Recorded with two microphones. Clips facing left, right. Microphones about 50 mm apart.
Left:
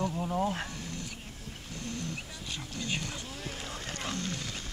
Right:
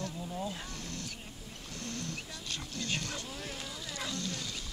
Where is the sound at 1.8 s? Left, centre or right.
Centre.